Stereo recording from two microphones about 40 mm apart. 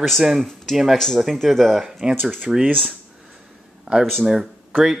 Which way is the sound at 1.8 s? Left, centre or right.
Centre.